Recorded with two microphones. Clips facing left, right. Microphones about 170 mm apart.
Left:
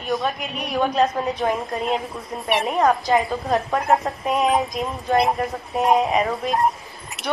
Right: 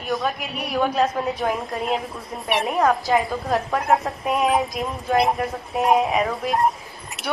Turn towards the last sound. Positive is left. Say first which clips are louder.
# even
turn(degrees=0)  # may be behind; listen again after turning